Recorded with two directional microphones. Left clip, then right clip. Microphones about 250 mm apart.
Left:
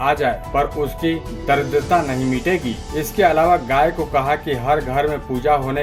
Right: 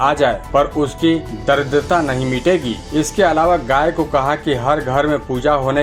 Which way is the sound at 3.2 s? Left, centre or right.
Centre.